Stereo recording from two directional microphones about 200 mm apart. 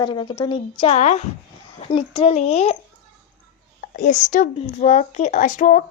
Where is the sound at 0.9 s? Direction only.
35° left (ahead or behind).